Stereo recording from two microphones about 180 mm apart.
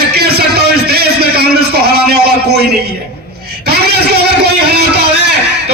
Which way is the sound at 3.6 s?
65° right (ahead or behind).